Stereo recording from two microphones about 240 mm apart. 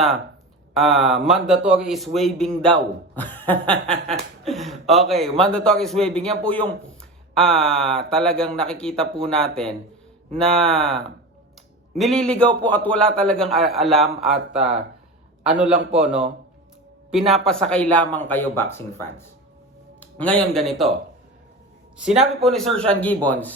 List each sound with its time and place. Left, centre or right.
0.7 s speech: centre
3.8 s chuckle: right
4.4 s speech: centre
21.9 s speech: centre